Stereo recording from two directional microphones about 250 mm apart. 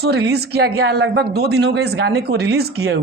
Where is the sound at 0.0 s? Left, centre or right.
Right.